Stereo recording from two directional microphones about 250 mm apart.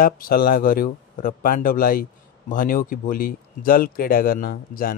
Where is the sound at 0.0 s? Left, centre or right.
Left.